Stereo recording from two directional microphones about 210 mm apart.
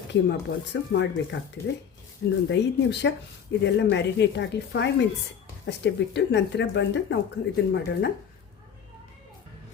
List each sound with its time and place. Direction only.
0.1 s speech: 55° left (ahead or behind)
2.5 s speech: 55° left (ahead or behind)